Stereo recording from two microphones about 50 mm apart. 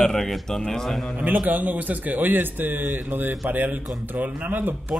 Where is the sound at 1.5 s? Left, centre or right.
Right.